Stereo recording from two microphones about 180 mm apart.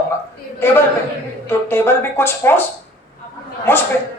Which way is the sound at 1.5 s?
10° left (ahead or behind).